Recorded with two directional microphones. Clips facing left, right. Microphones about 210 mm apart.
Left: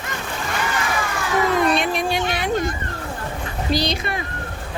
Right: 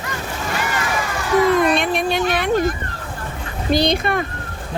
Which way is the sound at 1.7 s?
55° right (ahead or behind).